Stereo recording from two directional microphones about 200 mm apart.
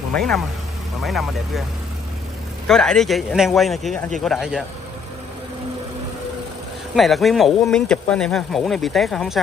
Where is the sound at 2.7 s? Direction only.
5° left (ahead or behind).